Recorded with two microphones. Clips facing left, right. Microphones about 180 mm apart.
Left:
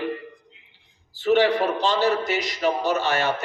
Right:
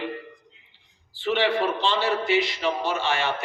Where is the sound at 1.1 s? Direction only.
40° left (ahead or behind).